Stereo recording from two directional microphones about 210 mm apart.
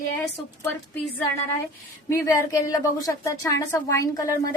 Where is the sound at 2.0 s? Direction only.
15° left (ahead or behind).